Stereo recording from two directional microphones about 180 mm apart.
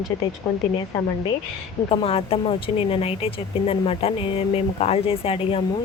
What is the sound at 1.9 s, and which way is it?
Speech, 30° left (ahead or behind).